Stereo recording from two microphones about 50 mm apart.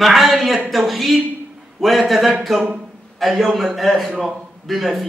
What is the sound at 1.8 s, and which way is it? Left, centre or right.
A man's voice, centre.